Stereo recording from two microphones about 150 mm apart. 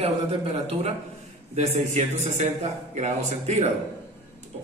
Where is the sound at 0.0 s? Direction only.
45° right (ahead or behind).